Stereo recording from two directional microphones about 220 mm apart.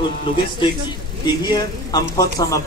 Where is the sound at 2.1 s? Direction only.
15° left (ahead or behind).